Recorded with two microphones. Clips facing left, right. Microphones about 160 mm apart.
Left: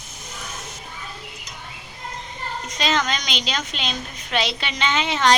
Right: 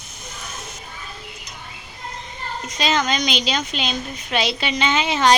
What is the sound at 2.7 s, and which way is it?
A woman's voice, 5° right (ahead or behind).